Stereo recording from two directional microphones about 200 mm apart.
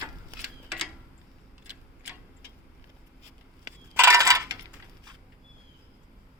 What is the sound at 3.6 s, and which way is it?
Coin, 15° right (ahead or behind).